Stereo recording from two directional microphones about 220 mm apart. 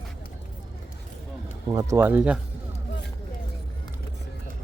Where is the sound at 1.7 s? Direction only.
15° right (ahead or behind).